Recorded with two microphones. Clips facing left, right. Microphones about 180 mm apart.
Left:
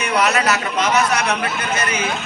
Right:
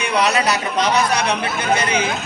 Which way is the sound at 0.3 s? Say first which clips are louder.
Even; 35° right (ahead or behind).